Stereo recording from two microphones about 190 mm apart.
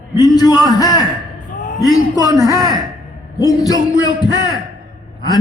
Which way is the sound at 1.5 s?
45° left (ahead or behind).